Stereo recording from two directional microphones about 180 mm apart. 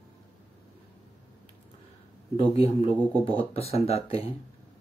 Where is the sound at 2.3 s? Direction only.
30° left (ahead or behind).